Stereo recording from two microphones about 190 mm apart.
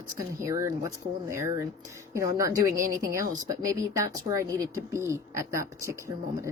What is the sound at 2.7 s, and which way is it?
Speech, 45° right (ahead or behind).